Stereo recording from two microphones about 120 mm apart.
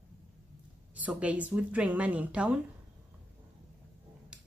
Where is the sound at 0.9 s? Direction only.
10° right (ahead or behind).